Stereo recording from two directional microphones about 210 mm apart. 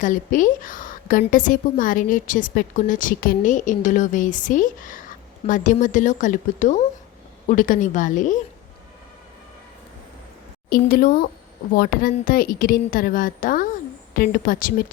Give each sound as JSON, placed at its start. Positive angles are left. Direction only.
{"t": 0.0, "sound": "a woman's voice", "side_deg": 40}
{"t": 10.7, "sound": "a woman's voice", "side_deg": 45}